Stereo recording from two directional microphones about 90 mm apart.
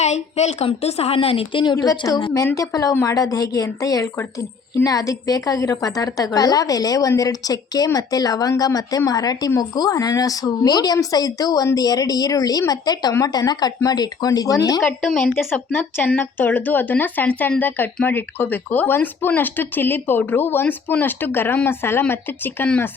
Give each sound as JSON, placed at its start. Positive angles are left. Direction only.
{"t": 1.1, "sound": "a woman's voice", "side_deg": 90}
{"t": 1.7, "sound": "a woman's voice", "side_deg": 40}
{"t": 15.0, "sound": "speech", "side_deg": 10}